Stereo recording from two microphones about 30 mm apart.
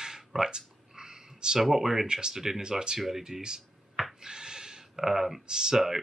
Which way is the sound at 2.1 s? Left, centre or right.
Right.